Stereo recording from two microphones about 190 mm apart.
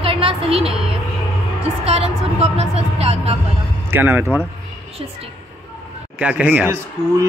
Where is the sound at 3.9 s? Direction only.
10° right (ahead or behind).